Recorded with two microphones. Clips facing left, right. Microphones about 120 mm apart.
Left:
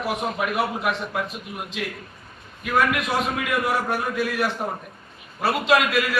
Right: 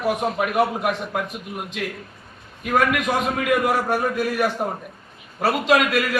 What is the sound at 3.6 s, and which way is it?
A man's voice, 45° right (ahead or behind).